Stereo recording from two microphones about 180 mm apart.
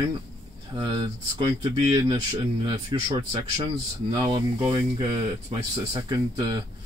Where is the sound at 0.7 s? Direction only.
25° right (ahead or behind).